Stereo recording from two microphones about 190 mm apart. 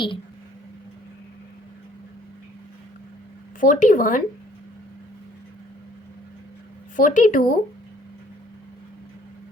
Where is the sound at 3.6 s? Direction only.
45° left (ahead or behind).